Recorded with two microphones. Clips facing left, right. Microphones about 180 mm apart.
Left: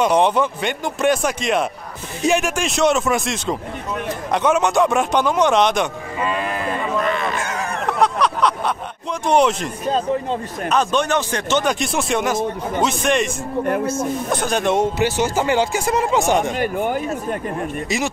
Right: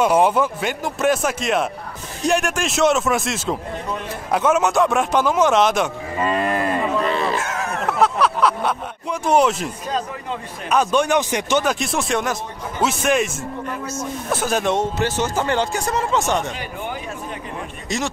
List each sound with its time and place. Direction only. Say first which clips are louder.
0.0 s speech: even; 5° right (ahead or behind)
6.1 s cattle: right 3 dB; 45° right (ahead or behind)
7.0 s a sound: right 1 dB; 30° right (ahead or behind)
7.3 s a sound: even; centre (ahead or behind)
9.2 s speech: left 1 dB; 5° right (ahead or behind)
10.7 s speech: right 1 dB; 10° right (ahead or behind)
13.7 s speech: left 11 dB; 55° left (ahead or behind)
14.3 s speech: right 1 dB; 5° right (ahead or behind)
14.8 s speech: left 3 dB; 10° left (ahead or behind)
16.5 s speech: left 9 dB; 50° left (ahead or behind)
17.8 s speech: even; 10° left (ahead or behind)